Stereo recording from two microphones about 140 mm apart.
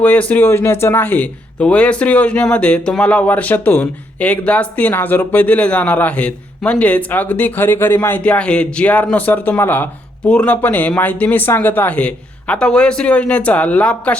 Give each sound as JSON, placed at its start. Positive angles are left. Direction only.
{"t": 0.0, "sound": "speech", "side_deg": 10}